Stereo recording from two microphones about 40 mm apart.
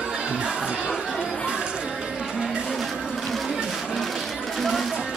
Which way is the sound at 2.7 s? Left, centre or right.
Centre.